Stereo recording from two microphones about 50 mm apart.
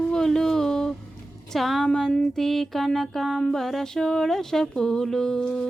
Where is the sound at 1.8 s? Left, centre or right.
Centre.